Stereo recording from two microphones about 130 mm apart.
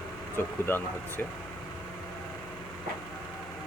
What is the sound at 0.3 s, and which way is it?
Speech, 15° left (ahead or behind).